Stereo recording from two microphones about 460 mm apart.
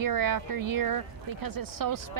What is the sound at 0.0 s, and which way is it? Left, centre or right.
A woman's voice, right.